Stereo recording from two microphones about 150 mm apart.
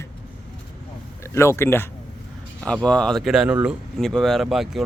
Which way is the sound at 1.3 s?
15° left (ahead or behind).